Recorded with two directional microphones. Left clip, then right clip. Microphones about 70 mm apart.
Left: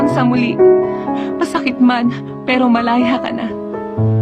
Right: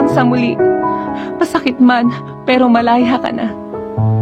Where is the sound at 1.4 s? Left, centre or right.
Right.